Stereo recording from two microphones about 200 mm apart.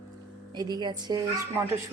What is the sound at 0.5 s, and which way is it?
Speech, 20° right (ahead or behind).